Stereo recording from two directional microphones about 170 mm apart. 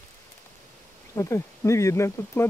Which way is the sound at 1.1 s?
15° left (ahead or behind).